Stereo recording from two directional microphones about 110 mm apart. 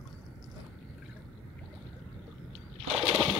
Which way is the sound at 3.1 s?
Centre (ahead or behind).